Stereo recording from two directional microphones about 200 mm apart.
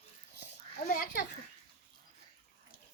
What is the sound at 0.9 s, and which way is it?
Children playing, 45° left (ahead or behind).